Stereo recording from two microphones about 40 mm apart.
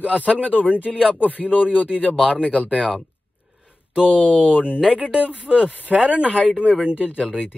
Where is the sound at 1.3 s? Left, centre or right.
Left.